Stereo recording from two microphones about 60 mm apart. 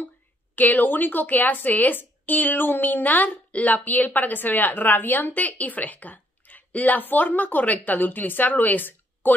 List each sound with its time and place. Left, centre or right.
0.6 s a woman's voice: left